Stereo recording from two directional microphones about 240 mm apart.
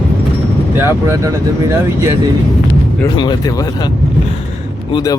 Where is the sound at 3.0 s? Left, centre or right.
Centre.